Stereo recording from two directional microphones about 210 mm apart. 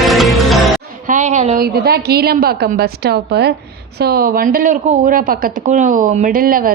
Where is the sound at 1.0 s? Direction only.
35° right (ahead or behind).